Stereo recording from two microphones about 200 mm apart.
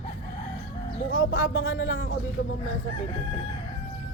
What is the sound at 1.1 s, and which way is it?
Speech, 70° left (ahead or behind).